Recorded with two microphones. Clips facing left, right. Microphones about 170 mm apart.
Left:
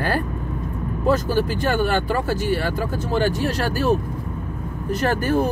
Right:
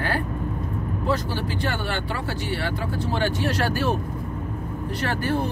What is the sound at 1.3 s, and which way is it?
Speech, 45° left (ahead or behind).